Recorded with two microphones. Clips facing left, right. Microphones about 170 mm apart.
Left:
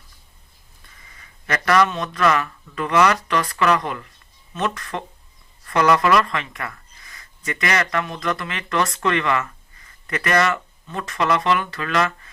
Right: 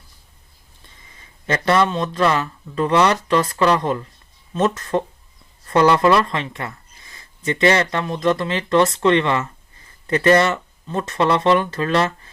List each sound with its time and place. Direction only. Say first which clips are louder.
0.9 s speech: right 1 dB; 25° right (ahead or behind)